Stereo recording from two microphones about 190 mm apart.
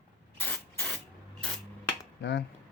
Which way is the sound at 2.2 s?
60° left (ahead or behind).